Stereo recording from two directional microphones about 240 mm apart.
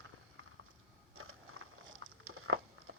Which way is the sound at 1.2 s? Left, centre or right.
Right.